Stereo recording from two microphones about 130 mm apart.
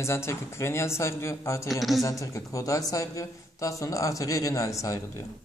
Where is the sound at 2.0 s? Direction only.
25° left (ahead or behind).